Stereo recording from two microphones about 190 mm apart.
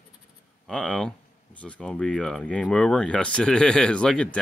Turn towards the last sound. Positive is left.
turn(degrees=5)  # may be behind; listen again after turning